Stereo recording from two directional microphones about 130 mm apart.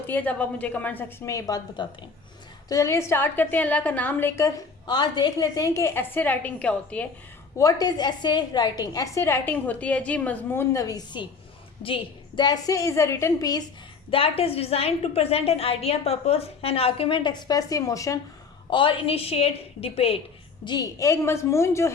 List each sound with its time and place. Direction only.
0.1 s a woman's voice: 10° left (ahead or behind)
7.6 s a woman's voice: 30° left (ahead or behind)
11.8 s a woman's voice: 45° left (ahead or behind)
14.1 s a woman's voice: 45° left (ahead or behind); by 18.2 s 25° left (ahead or behind)
18.7 s a woman's voice: 40° left (ahead or behind)
20.7 s a woman's voice: 30° left (ahead or behind)